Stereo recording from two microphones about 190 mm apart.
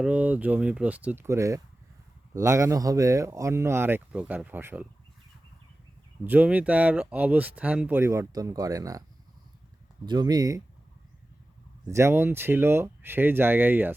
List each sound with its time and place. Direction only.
0.0 s speech: 10° right (ahead or behind)
6.2 s speech: 10° right (ahead or behind)
10.1 s speech: 20° right (ahead or behind)
11.9 s speech: 15° right (ahead or behind)